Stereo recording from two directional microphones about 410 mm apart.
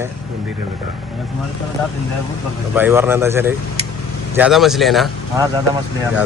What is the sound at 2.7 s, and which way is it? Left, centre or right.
Speech, centre.